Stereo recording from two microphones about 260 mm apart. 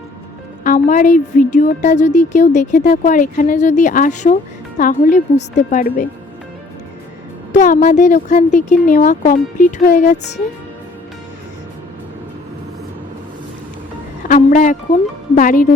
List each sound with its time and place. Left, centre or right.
0.6 s a woman's voice: left
7.5 s speech: left
14.3 s a woman's voice: left